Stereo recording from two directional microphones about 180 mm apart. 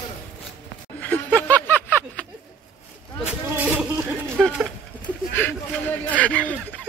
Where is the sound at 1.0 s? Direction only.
10° left (ahead or behind).